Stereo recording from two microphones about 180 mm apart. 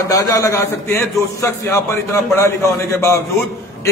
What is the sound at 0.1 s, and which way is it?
A man's voice, 20° left (ahead or behind).